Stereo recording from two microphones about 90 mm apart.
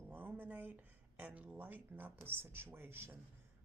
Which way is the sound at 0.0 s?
20° right (ahead or behind).